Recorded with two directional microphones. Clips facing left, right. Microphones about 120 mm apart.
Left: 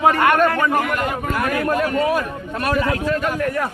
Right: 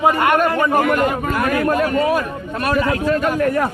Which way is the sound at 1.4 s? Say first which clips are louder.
Right 3 dB; 60° right (ahead or behind).